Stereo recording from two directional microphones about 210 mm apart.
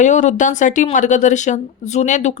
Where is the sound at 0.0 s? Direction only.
35° left (ahead or behind).